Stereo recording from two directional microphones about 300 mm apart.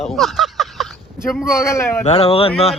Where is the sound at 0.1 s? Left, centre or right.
Centre.